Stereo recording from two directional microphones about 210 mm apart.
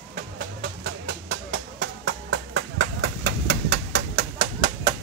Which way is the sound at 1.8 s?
65° right (ahead or behind).